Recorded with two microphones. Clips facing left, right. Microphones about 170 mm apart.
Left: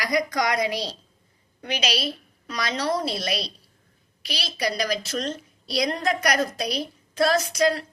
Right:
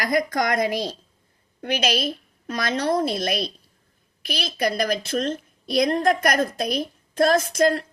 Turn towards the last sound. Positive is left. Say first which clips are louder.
# right 3 dB
turn(degrees=-50)  # may be behind; listen again after turning